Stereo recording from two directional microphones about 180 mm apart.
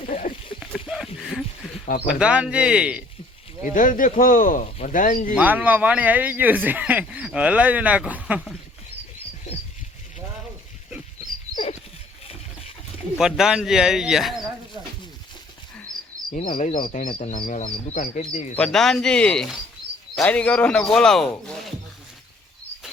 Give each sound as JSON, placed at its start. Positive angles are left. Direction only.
{"t": 0.1, "sound": "a sound", "side_deg": 45}
{"t": 1.2, "sound": "a sound", "side_deg": 0}
{"t": 2.0, "sound": "speech", "side_deg": -5}
{"t": 3.6, "sound": "speech", "side_deg": 45}
{"t": 5.4, "sound": "speech", "side_deg": -10}
{"t": 13.1, "sound": "speech", "side_deg": -5}
{"t": 15.9, "sound": "a sound", "side_deg": -20}
{"t": 16.6, "sound": "speech", "side_deg": 45}
{"t": 17.1, "sound": "speech", "side_deg": 30}
{"t": 17.5, "sound": "speech", "side_deg": 45}
{"t": 18.5, "sound": "speech", "side_deg": 5}